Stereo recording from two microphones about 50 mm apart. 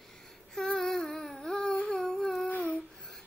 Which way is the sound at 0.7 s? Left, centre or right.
Centre.